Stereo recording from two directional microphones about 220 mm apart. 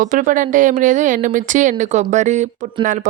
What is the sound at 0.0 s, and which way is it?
Speech, 35° right (ahead or behind).